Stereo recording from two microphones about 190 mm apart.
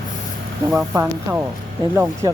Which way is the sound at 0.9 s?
10° right (ahead or behind).